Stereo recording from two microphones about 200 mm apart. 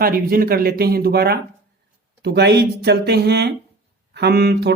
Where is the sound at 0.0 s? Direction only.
45° right (ahead or behind).